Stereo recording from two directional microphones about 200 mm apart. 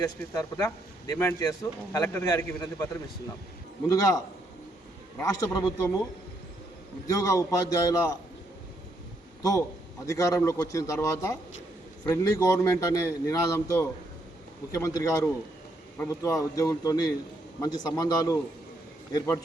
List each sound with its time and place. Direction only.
0.3 s speech: 15° left (ahead or behind)
3.8 s a man's voice: 20° left (ahead or behind)
7.1 s speech: 15° left (ahead or behind)
9.4 s a man's voice: 15° left (ahead or behind)